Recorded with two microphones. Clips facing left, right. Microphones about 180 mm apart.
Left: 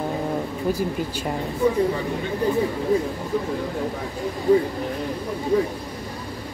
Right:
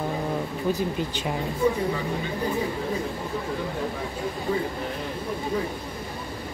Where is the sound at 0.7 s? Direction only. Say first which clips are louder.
Left 1 dB; 10° left (ahead or behind).